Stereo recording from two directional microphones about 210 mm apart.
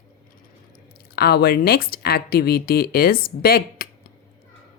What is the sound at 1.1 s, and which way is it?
Speech, 50° left (ahead or behind).